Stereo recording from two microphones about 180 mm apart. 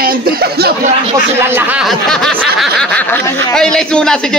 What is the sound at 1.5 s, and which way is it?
Speech, 5° right (ahead or behind).